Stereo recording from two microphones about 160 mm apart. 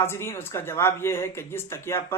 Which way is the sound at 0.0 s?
15° left (ahead or behind).